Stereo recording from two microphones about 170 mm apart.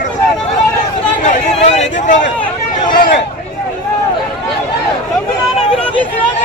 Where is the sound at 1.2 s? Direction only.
45° left (ahead or behind).